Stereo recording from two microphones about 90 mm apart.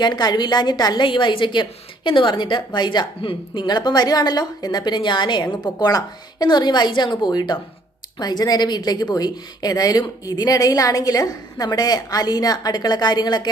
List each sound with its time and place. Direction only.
0.0 s a woman's voice: 55° left (ahead or behind)
3.2 s a woman's voice: 70° left (ahead or behind); by 13.5 s 55° left (ahead or behind)